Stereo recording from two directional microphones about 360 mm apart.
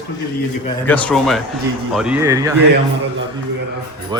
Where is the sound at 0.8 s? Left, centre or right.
Centre.